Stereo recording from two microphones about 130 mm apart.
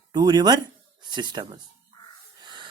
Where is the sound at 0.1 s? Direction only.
30° right (ahead or behind).